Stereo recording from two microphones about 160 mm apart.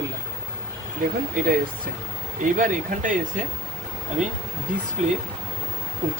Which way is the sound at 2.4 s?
55° right (ahead or behind).